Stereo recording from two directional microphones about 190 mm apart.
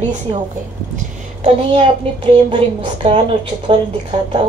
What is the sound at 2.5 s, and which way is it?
A woman's voice, 25° right (ahead or behind).